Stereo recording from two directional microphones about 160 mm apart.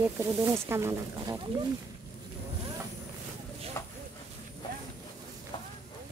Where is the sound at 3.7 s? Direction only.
20° left (ahead or behind).